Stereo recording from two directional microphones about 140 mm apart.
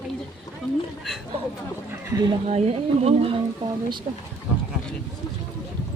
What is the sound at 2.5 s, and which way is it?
Speech, 50° right (ahead or behind).